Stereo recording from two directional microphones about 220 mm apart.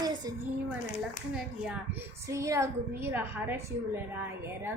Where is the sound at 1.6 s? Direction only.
10° right (ahead or behind).